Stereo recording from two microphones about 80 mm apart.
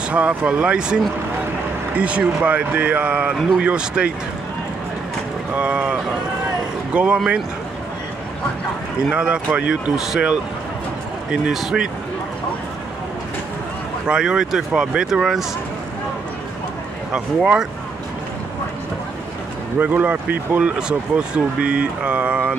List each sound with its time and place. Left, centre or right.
0.1 s speech: centre
5.5 s speech: centre
9.1 s speech: centre
11.4 s speech: centre
14.0 s speech: centre
17.1 s speech: centre
19.8 s speech: centre